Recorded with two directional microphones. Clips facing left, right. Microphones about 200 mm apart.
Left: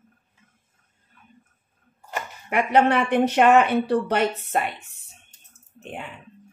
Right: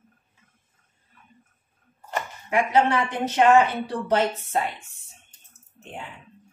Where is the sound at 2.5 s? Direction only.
60° left (ahead or behind).